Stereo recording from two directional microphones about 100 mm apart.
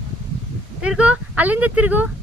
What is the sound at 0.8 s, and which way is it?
Speech, 10° right (ahead or behind).